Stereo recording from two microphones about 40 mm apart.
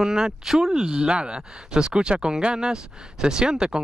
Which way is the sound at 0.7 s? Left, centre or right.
Right.